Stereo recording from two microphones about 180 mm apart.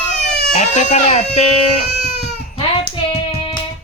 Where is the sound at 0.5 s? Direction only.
40° left (ahead or behind).